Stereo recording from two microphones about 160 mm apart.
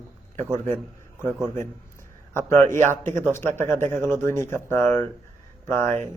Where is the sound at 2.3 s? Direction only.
15° left (ahead or behind).